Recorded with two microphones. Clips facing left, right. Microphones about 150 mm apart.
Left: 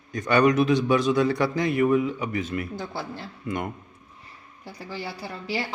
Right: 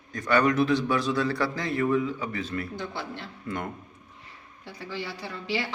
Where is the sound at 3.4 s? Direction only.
15° left (ahead or behind).